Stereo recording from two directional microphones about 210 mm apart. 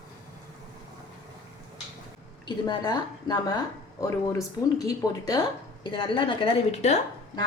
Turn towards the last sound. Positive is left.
turn(degrees=30)  # may be behind; listen again after turning